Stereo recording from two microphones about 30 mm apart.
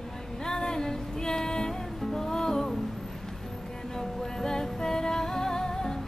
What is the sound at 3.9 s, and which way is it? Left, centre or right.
Music, centre.